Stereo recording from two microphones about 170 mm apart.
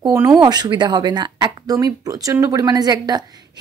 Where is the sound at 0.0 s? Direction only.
15° right (ahead or behind).